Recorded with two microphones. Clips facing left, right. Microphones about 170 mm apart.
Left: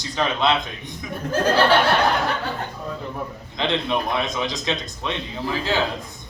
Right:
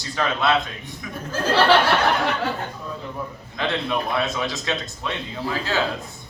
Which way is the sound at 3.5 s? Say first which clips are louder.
Left 1 dB; 20° left (ahead or behind).